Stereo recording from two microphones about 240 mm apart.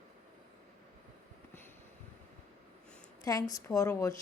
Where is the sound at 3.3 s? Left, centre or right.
Centre.